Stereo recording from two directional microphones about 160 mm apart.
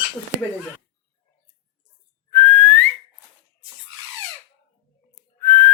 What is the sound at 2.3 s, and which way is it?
Whistling, 15° left (ahead or behind).